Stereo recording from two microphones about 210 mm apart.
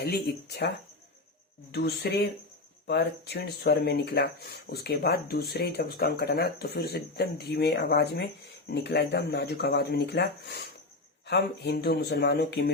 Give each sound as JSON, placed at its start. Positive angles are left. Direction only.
{"t": 0.0, "sound": "speech", "side_deg": 50}
{"t": 1.7, "sound": "speech", "side_deg": 50}